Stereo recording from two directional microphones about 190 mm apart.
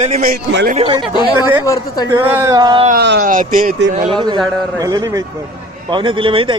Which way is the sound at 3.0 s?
60° right (ahead or behind).